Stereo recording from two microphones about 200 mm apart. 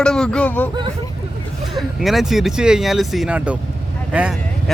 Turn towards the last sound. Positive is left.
turn(degrees=-5)  # may be behind; listen again after turning